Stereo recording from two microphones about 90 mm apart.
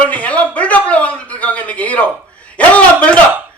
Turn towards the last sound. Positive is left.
turn(degrees=15)  # may be behind; listen again after turning